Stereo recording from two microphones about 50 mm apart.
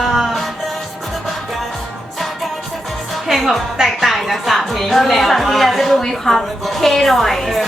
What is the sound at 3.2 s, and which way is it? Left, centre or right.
Music, centre.